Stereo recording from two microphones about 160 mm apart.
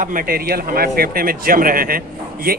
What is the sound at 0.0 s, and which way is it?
Speech, 60° right (ahead or behind).